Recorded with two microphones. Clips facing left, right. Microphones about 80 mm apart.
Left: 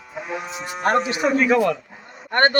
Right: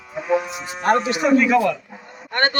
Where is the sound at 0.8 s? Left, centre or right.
Left.